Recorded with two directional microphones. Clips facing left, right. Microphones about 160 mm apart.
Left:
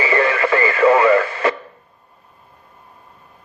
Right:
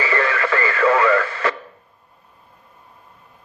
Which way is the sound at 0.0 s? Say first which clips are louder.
Left 4 dB; 15° left (ahead or behind).